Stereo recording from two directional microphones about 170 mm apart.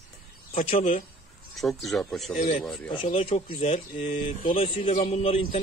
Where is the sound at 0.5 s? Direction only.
40° left (ahead or behind).